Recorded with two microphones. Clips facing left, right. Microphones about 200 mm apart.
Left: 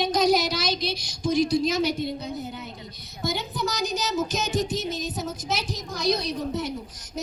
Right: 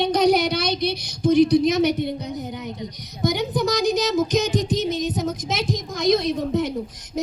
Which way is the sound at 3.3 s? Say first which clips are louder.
Right 7 dB; 15° right (ahead or behind).